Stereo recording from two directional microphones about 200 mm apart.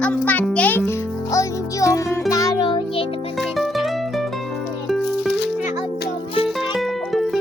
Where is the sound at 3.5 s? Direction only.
Centre (ahead or behind).